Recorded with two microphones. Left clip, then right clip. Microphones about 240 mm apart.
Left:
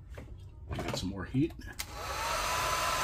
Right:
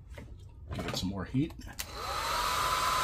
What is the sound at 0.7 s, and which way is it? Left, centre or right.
Speech, right.